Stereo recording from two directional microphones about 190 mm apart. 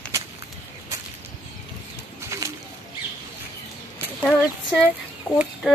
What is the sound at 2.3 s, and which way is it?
Bird, 15° right (ahead or behind).